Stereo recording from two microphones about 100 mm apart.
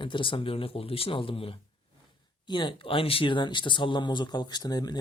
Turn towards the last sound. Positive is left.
turn(degrees=40)  # may be behind; listen again after turning